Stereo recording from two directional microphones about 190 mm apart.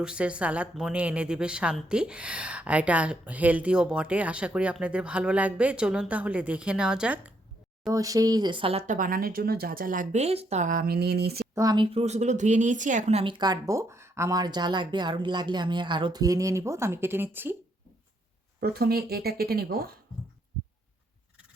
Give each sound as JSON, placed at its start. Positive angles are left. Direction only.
{"t": 0.0, "sound": "a woman's voice", "side_deg": -5}
{"t": 7.9, "sound": "speech", "side_deg": -20}
{"t": 11.5, "sound": "speech", "side_deg": -20}
{"t": 18.6, "sound": "speech", "side_deg": -55}